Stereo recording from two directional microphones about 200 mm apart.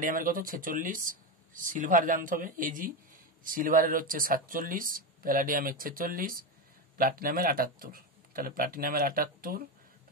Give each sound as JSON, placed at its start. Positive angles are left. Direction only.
{"t": 0.0, "sound": "speech", "side_deg": -45}